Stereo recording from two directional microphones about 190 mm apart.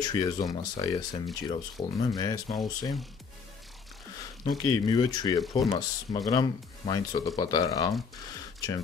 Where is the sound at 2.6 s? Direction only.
20° left (ahead or behind).